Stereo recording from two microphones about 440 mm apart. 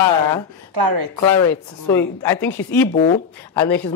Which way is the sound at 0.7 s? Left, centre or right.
Right.